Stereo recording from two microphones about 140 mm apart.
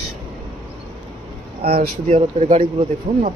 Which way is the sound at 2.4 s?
65° right (ahead or behind).